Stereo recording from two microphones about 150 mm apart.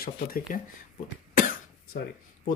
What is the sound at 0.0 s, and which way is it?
Speech, 75° left (ahead or behind).